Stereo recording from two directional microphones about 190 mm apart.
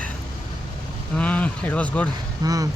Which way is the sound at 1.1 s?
5° left (ahead or behind).